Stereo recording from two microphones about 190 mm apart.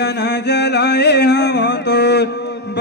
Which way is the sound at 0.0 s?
65° left (ahead or behind).